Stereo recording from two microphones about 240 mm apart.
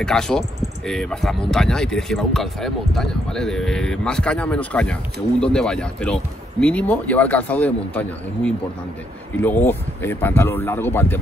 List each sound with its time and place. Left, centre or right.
0.0 s speech: centre